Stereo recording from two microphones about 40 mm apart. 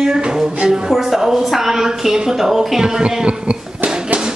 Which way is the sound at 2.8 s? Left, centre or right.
Right.